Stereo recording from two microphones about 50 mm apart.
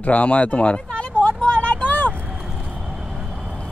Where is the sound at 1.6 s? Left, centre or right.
Left.